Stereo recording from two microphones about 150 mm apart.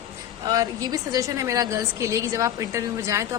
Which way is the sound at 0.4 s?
25° right (ahead or behind).